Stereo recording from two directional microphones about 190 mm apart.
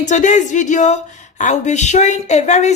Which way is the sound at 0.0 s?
40° left (ahead or behind).